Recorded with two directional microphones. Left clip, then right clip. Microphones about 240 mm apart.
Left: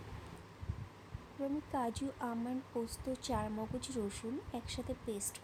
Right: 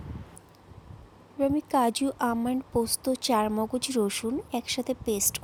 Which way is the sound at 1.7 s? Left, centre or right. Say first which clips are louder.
Right 14 dB; right.